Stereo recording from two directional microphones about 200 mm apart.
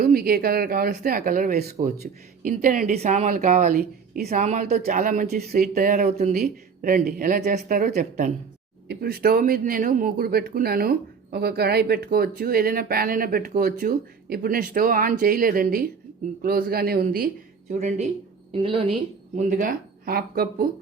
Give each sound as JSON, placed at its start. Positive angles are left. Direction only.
{"t": 0.0, "sound": "speech", "side_deg": -50}
{"t": 17.7, "sound": "a woman's voice", "side_deg": -35}
{"t": 19.4, "sound": "speech", "side_deg": -40}